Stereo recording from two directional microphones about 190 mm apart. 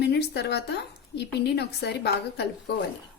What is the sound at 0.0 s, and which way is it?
A woman's voice, 60° left (ahead or behind).